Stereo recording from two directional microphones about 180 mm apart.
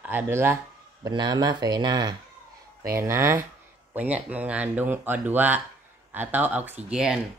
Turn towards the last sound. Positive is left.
turn(degrees=-5)  # may be behind; listen again after turning